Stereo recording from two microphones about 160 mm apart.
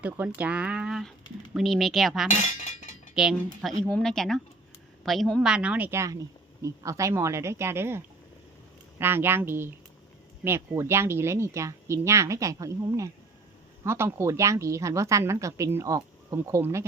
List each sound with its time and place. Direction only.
0.0 s speech: 10° right (ahead or behind)
2.3 s speech: 50° left (ahead or behind)
3.2 s a woman's voice: centre (ahead or behind)